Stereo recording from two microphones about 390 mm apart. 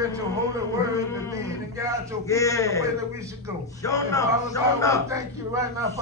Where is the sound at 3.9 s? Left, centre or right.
Centre.